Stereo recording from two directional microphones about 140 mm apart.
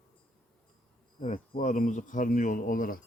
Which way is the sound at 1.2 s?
60° left (ahead or behind).